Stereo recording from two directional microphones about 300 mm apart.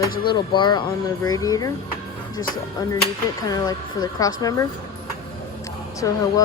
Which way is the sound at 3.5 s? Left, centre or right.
Centre.